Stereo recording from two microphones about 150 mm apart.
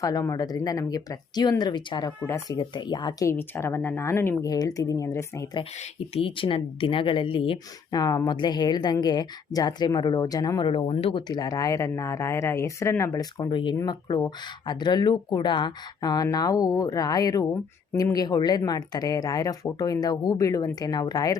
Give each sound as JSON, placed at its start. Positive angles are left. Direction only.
{"t": 0.0, "sound": "speech", "side_deg": 25}
{"t": 2.2, "sound": "speech", "side_deg": 20}
{"t": 2.6, "sound": "speech", "side_deg": 30}
{"t": 6.1, "sound": "speech", "side_deg": 35}
{"t": 13.4, "sound": "speech", "side_deg": 30}